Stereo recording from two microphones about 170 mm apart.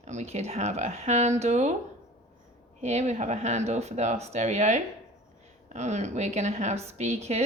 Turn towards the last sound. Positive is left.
turn(degrees=-40)  # may be behind; listen again after turning